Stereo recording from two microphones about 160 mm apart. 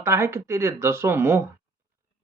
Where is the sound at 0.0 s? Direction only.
15° right (ahead or behind).